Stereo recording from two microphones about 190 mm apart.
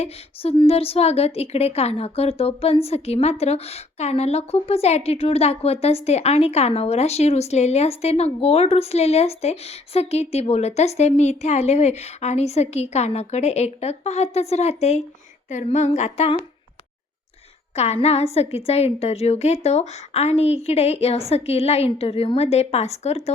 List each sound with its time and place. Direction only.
0.0 s a woman's voice: 30° left (ahead or behind)
18.0 s a woman's voice: 35° left (ahead or behind)